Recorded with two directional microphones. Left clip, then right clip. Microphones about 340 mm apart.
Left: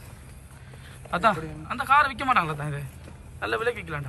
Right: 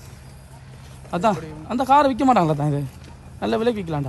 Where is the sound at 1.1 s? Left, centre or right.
Centre.